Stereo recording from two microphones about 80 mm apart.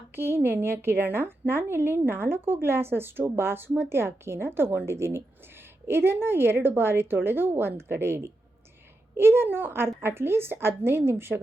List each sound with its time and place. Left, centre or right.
0.2 s a woman's voice: right